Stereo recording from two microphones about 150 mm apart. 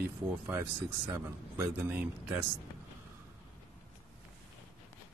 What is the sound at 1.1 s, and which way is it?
Speech, 15° right (ahead or behind).